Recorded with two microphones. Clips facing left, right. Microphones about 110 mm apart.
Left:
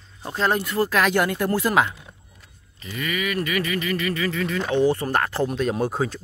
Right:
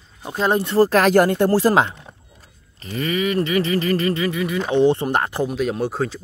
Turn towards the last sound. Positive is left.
turn(degrees=0)  # may be behind; listen again after turning